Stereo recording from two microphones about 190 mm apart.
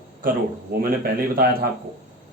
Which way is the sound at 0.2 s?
50° right (ahead or behind).